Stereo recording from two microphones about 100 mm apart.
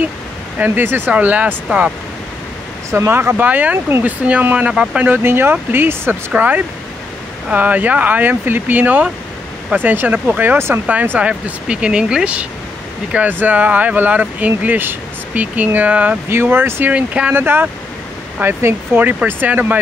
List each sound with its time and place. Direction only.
0.6 s speech: 20° right (ahead or behind)
2.9 s speech: 25° right (ahead or behind)
5.0 s speech: 20° right (ahead or behind)
16.9 s speech: 15° right (ahead or behind)